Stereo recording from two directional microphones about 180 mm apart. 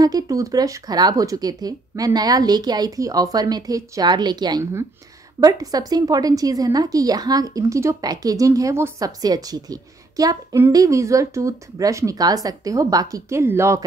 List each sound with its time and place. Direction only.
0.0 s a woman's voice: 20° right (ahead or behind)